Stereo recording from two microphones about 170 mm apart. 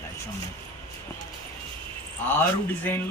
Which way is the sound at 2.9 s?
10° left (ahead or behind).